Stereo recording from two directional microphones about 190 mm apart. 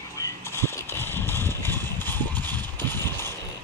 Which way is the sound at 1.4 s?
15° right (ahead or behind).